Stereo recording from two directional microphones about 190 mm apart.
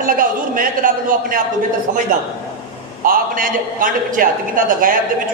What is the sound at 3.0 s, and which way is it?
A man's voice, 50° right (ahead or behind).